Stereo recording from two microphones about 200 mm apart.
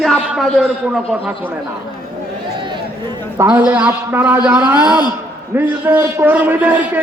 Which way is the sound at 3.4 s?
10° right (ahead or behind).